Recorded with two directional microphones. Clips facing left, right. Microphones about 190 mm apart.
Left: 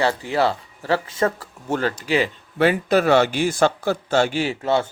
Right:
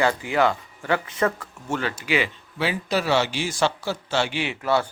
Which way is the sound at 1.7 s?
40° left (ahead or behind).